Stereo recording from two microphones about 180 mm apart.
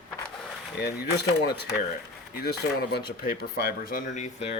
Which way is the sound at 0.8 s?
65° left (ahead or behind).